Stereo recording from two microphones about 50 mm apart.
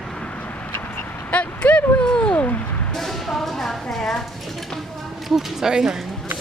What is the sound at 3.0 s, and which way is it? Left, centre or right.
Speech, centre.